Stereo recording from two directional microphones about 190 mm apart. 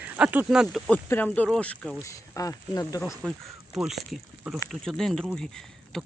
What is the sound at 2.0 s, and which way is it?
Speech, 15° left (ahead or behind).